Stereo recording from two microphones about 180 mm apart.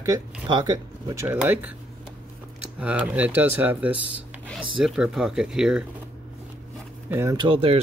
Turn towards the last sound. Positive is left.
turn(degrees=-30)  # may be behind; listen again after turning